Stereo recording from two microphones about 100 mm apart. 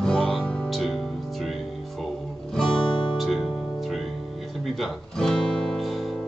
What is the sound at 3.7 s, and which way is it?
Guitar, centre (ahead or behind).